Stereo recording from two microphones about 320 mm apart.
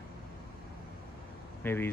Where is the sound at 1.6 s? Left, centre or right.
Centre.